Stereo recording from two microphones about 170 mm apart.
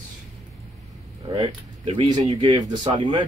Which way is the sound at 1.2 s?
25° right (ahead or behind).